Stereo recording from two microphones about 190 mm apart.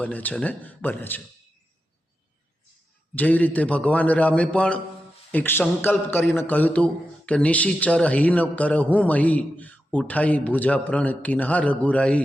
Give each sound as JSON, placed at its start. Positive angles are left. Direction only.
{"t": 0.0, "sound": "a man's voice", "side_deg": 10}
{"t": 3.2, "sound": "a man's voice", "side_deg": 10}